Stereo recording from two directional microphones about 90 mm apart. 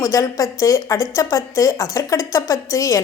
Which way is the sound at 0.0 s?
35° left (ahead or behind).